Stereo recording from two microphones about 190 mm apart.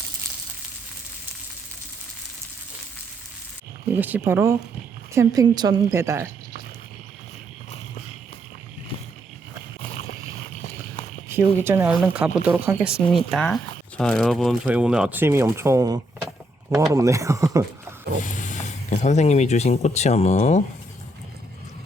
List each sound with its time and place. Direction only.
3.9 s a woman's voice: 10° right (ahead or behind)
11.3 s a woman's voice: 15° right (ahead or behind)
18.5 s speech: 40° left (ahead or behind)